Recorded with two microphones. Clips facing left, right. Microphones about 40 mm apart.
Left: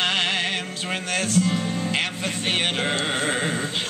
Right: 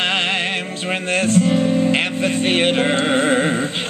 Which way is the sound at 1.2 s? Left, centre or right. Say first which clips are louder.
Right 8 dB; right.